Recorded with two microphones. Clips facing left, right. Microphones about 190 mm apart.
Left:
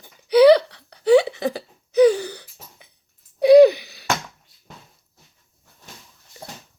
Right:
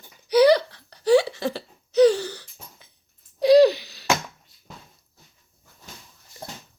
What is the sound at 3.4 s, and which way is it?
Gasp, 55° left (ahead or behind).